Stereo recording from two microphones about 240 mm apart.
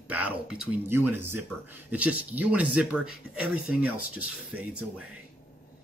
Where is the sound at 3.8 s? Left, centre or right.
Right.